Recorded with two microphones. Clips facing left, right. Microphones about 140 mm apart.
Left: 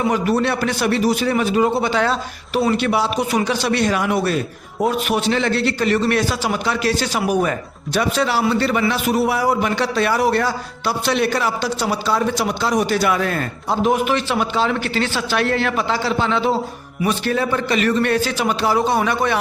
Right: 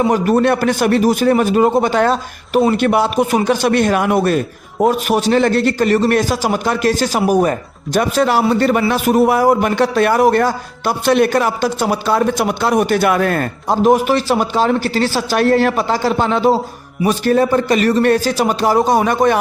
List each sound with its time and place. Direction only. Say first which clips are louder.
0.1 s a man's voice: right 5 dB; 45° right (ahead or behind)